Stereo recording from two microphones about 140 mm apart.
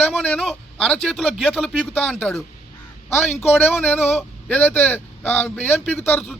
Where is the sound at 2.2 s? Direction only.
15° left (ahead or behind).